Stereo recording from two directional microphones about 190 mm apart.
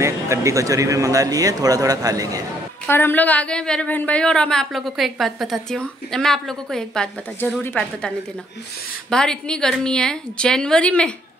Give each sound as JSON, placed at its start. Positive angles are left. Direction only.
{"t": 0.0, "sound": "speech", "side_deg": -15}
{"t": 2.9, "sound": "a woman's voice", "side_deg": 10}
{"t": 9.1, "sound": "a woman's voice", "side_deg": 5}